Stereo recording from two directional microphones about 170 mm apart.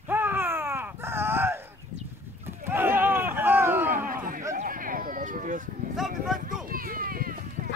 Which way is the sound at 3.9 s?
55° right (ahead or behind).